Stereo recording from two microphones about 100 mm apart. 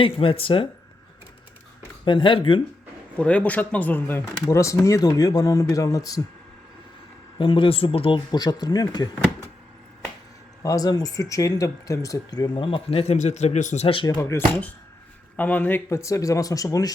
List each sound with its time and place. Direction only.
0.0 s speech: 65° left (ahead or behind)
2.0 s speech: 55° left (ahead or behind)
3.2 s speech: 10° left (ahead or behind)
4.4 s speech: 30° left (ahead or behind)
7.3 s speech: 60° left (ahead or behind)
8.3 s speech: 40° left (ahead or behind)
10.6 s speech: 35° left (ahead or behind)
12.5 s speech: 60° left (ahead or behind); by 13.1 s 80° left
13.4 s speech: 90° left
13.7 s speech: 65° left (ahead or behind)
14.2 s speech: 25° left (ahead or behind)
15.9 s speech: 30° left (ahead or behind)